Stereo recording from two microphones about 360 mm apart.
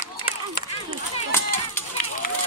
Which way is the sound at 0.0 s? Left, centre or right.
Left.